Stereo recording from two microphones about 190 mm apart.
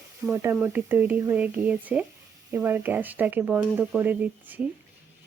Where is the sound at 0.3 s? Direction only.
15° right (ahead or behind).